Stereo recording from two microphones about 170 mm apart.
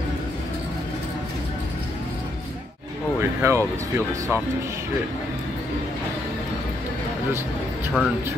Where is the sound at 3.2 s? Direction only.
15° right (ahead or behind).